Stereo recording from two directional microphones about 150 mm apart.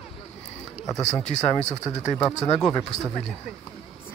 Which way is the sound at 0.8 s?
25° left (ahead or behind).